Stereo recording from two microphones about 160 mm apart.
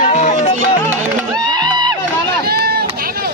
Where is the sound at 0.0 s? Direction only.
50° left (ahead or behind).